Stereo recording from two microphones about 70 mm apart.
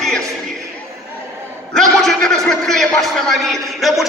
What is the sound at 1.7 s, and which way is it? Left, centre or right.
A man's voice, centre.